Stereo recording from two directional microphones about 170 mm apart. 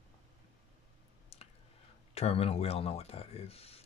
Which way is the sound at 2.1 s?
35° left (ahead or behind).